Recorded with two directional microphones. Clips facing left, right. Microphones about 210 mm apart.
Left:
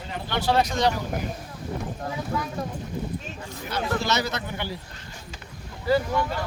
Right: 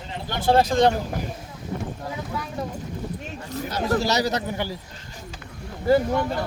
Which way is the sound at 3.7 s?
40° right (ahead or behind).